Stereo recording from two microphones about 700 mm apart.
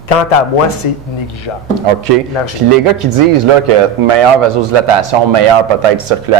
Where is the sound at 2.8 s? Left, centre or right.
Right.